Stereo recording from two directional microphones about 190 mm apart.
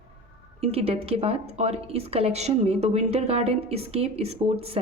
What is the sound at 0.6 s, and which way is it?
Speech, 30° right (ahead or behind).